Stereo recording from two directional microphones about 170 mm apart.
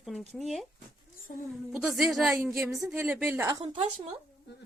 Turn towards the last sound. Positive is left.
turn(degrees=-35)  # may be behind; listen again after turning